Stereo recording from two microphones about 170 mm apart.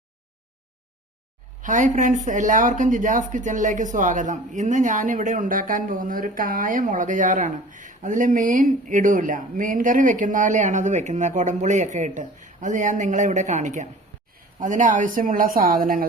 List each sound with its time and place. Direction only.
1.6 s speech: 50° right (ahead or behind)